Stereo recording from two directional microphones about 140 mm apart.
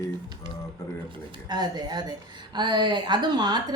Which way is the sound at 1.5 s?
30° right (ahead or behind).